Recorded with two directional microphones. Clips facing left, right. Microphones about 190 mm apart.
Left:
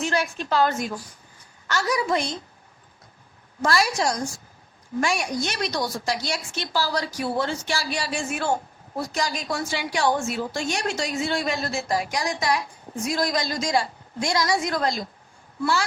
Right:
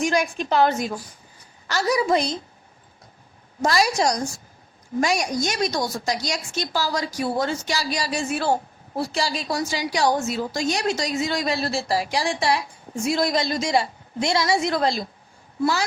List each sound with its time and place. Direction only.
0.0 s a woman's voice: 15° right (ahead or behind)
1.6 s a woman's voice: 35° right (ahead or behind)
3.8 s a woman's voice: 40° right (ahead or behind)